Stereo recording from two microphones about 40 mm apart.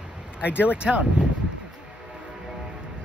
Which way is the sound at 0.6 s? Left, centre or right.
Right.